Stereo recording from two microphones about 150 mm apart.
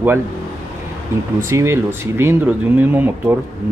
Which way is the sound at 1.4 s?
20° right (ahead or behind).